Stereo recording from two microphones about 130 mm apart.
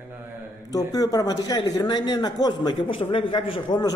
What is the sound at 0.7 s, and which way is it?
Speech, 30° left (ahead or behind).